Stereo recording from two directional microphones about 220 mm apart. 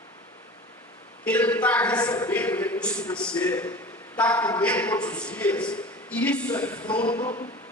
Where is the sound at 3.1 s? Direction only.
5° left (ahead or behind).